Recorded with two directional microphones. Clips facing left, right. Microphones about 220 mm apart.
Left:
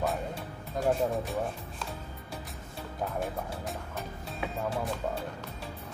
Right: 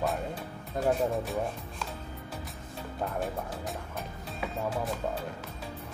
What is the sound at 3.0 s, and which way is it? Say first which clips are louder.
Music: even; centre (ahead or behind).